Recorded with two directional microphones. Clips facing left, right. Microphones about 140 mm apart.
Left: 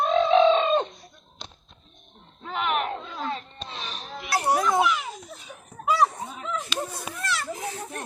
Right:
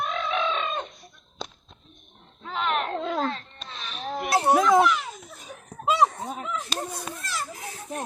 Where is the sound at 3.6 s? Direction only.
30° left (ahead or behind).